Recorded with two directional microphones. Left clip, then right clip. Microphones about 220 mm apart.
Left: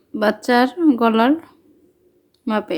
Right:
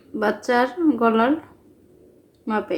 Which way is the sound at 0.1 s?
45° left (ahead or behind).